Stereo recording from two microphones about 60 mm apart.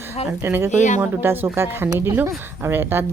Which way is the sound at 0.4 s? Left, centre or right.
Right.